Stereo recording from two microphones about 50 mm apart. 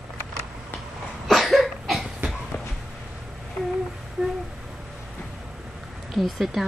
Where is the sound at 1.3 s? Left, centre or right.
Centre.